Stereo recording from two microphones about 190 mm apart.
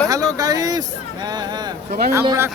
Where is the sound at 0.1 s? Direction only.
20° right (ahead or behind).